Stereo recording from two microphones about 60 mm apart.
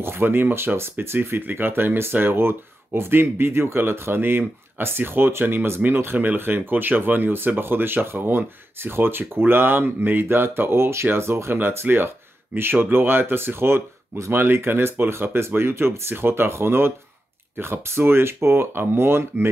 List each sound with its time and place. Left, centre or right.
0.0 s speech: right
11.5 s speech: right